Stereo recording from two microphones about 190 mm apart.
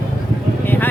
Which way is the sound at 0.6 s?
10° left (ahead or behind).